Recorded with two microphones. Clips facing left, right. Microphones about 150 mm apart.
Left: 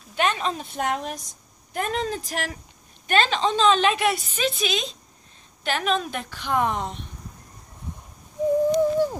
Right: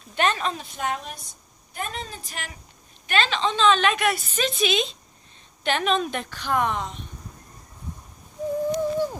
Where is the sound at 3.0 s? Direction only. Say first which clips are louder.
Left 2 dB; 45° left (ahead or behind); by 4.2 s 25° left (ahead or behind).